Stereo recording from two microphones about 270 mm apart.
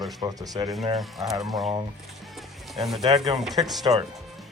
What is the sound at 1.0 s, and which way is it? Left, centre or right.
Speech, centre.